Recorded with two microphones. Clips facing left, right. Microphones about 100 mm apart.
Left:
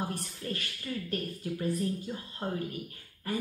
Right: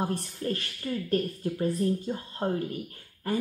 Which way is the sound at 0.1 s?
35° right (ahead or behind).